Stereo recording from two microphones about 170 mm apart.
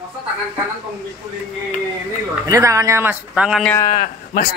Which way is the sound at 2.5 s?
20° right (ahead or behind).